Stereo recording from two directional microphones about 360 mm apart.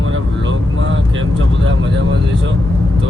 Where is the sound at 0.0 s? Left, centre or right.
Right.